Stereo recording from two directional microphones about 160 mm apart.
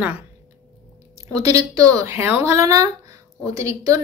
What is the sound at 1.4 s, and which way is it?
A woman's voice, 20° right (ahead or behind).